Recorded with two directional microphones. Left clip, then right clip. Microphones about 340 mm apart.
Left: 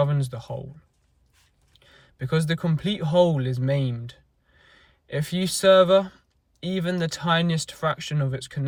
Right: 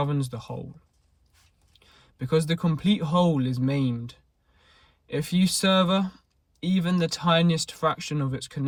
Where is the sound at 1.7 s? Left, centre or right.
Centre.